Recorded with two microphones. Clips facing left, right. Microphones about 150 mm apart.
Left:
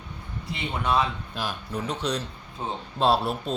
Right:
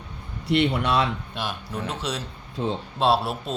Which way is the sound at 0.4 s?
75° right (ahead or behind).